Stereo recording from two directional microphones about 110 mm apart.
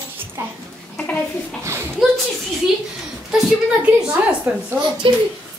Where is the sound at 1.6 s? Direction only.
25° right (ahead or behind).